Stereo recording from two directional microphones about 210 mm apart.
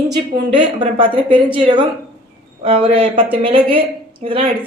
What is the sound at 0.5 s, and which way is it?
A woman's voice, 25° right (ahead or behind).